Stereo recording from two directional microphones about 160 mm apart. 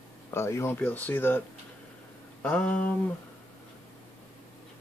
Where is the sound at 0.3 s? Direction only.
15° left (ahead or behind).